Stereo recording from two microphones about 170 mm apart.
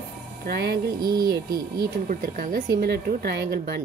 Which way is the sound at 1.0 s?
20° right (ahead or behind).